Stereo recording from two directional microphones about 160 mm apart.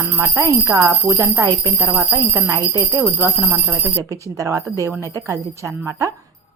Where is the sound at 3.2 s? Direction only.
10° right (ahead or behind).